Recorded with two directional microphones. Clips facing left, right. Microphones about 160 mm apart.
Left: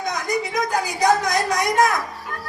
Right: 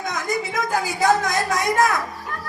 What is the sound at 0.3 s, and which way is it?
A woman's voice, 20° left (ahead or behind).